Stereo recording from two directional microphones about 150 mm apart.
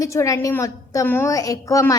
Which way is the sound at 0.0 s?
20° left (ahead or behind).